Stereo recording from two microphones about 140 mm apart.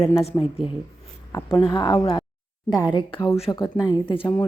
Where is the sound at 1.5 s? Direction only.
35° left (ahead or behind).